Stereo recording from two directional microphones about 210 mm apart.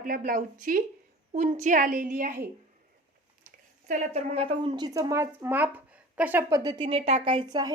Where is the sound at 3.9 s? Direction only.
30° right (ahead or behind).